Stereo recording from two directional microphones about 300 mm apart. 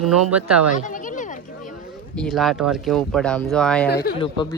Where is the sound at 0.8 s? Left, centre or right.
Left.